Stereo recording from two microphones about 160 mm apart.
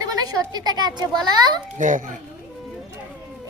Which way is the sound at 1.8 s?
55° right (ahead or behind).